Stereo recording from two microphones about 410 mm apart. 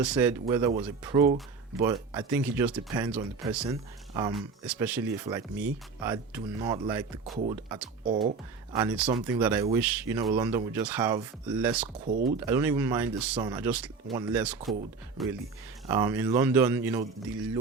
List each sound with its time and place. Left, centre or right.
0.0 s speech: centre
8.7 s speech: centre
12.0 s speech: right
12.5 s speech: centre